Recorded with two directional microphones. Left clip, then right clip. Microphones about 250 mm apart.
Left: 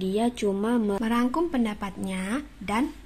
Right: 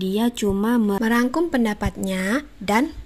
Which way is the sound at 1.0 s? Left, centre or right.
Right.